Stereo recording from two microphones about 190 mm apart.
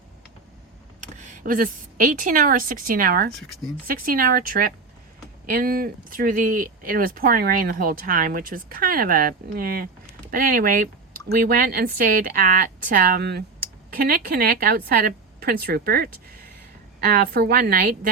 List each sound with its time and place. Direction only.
1.0 s speech: 40° right (ahead or behind)
3.3 s speech: centre (ahead or behind)
3.8 s speech: 50° right (ahead or behind)